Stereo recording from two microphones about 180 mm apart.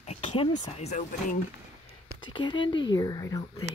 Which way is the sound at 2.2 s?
25° left (ahead or behind).